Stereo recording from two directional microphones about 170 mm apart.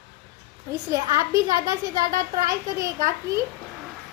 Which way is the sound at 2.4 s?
20° right (ahead or behind).